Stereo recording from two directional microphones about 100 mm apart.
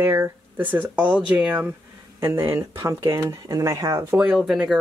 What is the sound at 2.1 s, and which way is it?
Speech, 25° right (ahead or behind).